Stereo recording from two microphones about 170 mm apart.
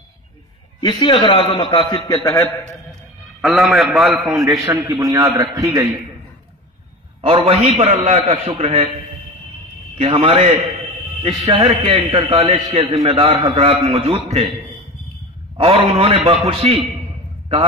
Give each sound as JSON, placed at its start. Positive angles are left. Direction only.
{"t": 0.7, "sound": "a man's voice", "side_deg": 25}
{"t": 3.3, "sound": "a man's voice", "side_deg": 0}
{"t": 4.5, "sound": "a man's voice", "side_deg": -20}
{"t": 7.2, "sound": "a man's voice", "side_deg": -35}
{"t": 9.9, "sound": "a man's voice", "side_deg": -35}
{"t": 15.5, "sound": "a man's voice", "side_deg": -35}